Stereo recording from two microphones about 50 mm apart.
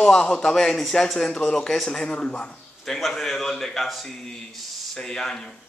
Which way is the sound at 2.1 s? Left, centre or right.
Left.